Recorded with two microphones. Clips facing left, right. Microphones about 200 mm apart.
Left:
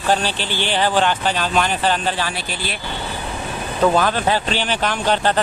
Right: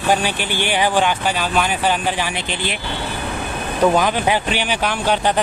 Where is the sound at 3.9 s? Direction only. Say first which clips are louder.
Right 1 dB; 15° right (ahead or behind).